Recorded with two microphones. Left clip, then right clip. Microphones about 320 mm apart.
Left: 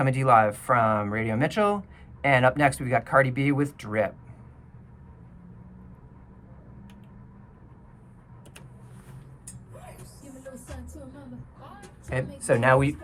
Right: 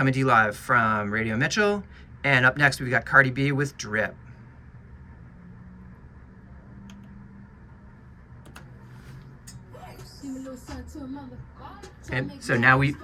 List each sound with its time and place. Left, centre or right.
0.0 s speech: centre
12.0 s speech: centre